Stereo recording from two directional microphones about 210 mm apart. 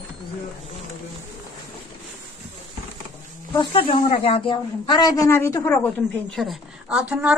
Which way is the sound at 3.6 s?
25° left (ahead or behind).